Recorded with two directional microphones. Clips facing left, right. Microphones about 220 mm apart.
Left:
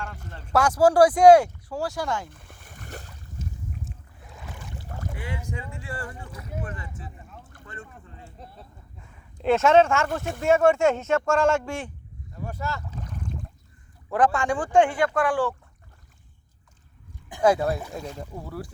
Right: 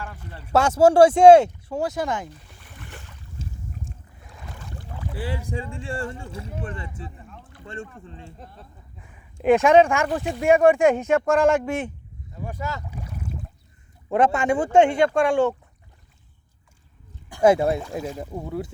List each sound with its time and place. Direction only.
0.5 s speech: 25° right (ahead or behind)
2.3 s boat: 50° left (ahead or behind)
3.4 s boat: 30° right (ahead or behind)
5.1 s speech: 30° right (ahead or behind)
8.4 s speech: centre (ahead or behind)
9.0 s speech: 15° right (ahead or behind)
12.4 s boat: 15° right (ahead or behind)
14.1 s speech: 20° right (ahead or behind)
17.4 s speech: 25° right (ahead or behind)
17.9 s speech: 10° right (ahead or behind)
18.3 s speech: 20° right (ahead or behind)